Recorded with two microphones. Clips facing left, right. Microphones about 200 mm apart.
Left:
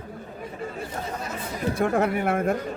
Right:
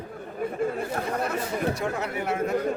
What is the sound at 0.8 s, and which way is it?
Chatter, 60° right (ahead or behind).